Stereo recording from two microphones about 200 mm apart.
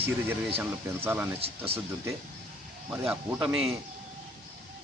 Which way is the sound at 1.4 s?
30° right (ahead or behind).